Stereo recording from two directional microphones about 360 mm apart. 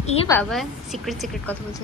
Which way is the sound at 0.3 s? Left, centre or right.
Centre.